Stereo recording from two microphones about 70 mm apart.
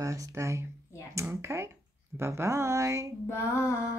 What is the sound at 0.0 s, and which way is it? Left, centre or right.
Speech, right.